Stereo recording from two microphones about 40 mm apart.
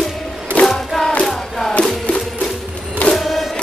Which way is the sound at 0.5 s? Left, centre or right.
Left.